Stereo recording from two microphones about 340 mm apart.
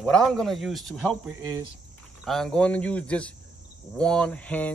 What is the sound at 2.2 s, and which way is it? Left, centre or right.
Speech, centre.